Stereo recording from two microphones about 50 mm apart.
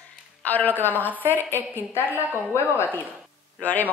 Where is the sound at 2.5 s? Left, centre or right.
Left.